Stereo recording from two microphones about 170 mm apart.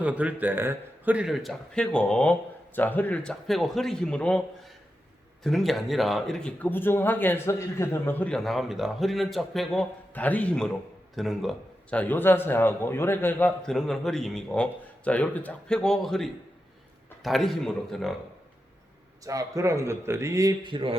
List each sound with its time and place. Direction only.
0.0 s a man's voice: 10° right (ahead or behind)
19.2 s a man's voice: 20° right (ahead or behind)